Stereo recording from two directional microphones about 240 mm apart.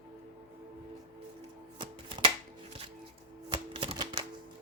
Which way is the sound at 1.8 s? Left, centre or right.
Right.